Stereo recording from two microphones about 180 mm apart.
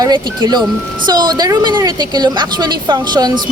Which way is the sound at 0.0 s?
25° right (ahead or behind).